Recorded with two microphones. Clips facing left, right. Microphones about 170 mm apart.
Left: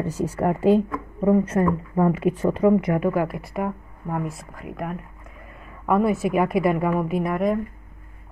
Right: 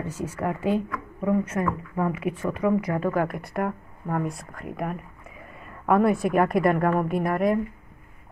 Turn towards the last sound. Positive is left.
turn(degrees=0)  # may be behind; listen again after turning